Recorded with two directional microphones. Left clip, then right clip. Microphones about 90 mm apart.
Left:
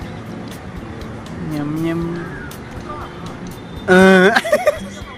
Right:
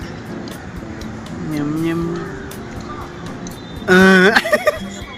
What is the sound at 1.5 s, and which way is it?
Vehicle, 25° left (ahead or behind).